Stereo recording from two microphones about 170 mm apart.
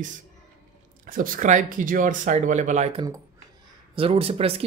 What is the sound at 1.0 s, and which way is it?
Speech, 55° right (ahead or behind).